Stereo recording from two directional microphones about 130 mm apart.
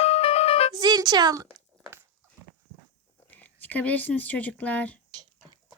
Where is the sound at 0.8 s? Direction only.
30° right (ahead or behind).